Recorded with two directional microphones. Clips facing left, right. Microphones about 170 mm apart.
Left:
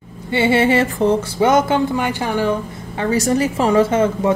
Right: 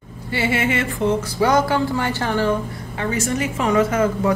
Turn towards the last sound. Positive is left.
turn(degrees=25)  # may be behind; listen again after turning